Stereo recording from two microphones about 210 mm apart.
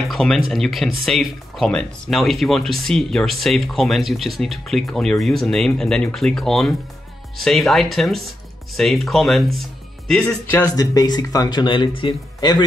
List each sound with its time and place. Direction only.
0.1 s speech: 5° left (ahead or behind); by 12.6 s 20° left (ahead or behind)